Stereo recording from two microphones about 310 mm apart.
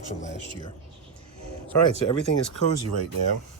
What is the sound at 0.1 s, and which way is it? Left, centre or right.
Speech, left.